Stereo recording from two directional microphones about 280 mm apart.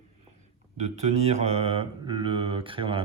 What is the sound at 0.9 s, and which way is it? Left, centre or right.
Speech, right.